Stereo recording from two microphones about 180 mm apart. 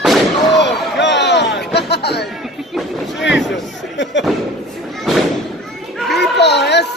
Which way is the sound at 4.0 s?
90° left.